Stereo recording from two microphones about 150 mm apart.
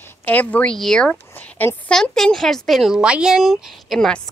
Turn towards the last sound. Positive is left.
turn(degrees=5)  # may be behind; listen again after turning